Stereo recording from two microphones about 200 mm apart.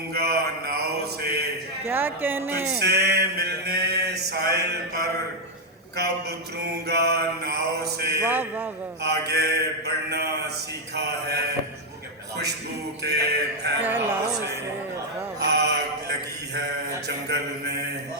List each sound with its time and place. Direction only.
0.1 s mantra: 50° right (ahead or behind)
1.8 s speech: 10° right (ahead or behind)
2.8 s a sound: 55° right (ahead or behind)
6.6 s a sound: 55° right (ahead or behind)
8.2 s speech: 10° right (ahead or behind)
9.0 s a sound: 55° right (ahead or behind)
13.0 s mantra: 55° right (ahead or behind)
13.8 s speech: 10° right (ahead or behind)
15.4 s mantra: 55° right (ahead or behind)